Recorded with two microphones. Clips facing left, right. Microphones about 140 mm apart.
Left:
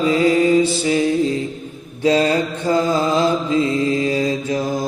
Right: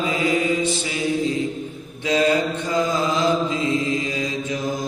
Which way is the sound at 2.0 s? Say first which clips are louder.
Left 3 dB; 35° left (ahead or behind).